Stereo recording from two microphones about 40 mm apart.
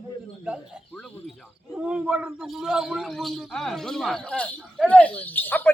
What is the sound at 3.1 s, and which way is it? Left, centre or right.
Speech, centre.